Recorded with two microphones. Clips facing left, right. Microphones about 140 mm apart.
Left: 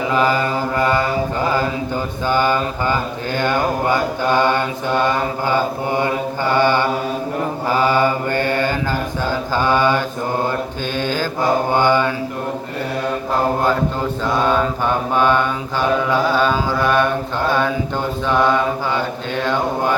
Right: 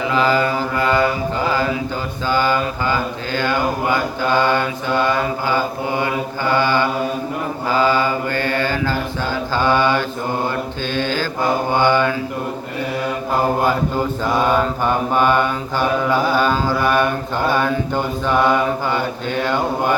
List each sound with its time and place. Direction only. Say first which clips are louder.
0.1 s mantra: even; 10° left (ahead or behind)
3.3 s mantra: left 1 dB; 20° left (ahead or behind)
8.3 s mantra: left 2 dB; 20° left (ahead or behind)
14.4 s mantra: even; 5° right (ahead or behind)